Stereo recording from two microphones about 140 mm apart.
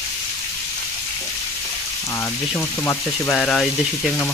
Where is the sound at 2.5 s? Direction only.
15° left (ahead or behind).